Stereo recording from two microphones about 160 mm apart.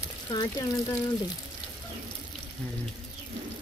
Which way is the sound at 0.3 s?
25° left (ahead or behind).